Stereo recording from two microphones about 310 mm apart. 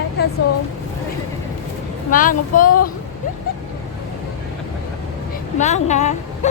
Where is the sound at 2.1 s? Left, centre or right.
Left.